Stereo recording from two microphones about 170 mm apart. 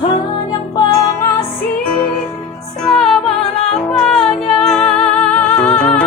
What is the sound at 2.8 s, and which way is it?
Music, centre (ahead or behind).